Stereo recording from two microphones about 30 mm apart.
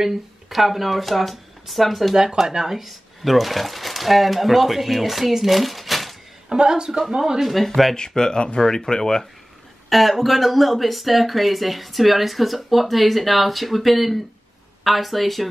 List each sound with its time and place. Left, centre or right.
0.0 s speech: centre
2.4 s speech: right
2.7 s speech: centre
6.5 s speech: right
7.6 s speech: centre
8.2 s speech: left
9.8 s speech: centre